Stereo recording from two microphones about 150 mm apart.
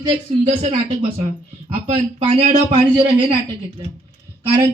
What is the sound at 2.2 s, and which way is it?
Speech, 40° right (ahead or behind).